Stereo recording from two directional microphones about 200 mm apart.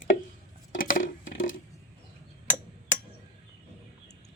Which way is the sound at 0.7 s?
45° left (ahead or behind).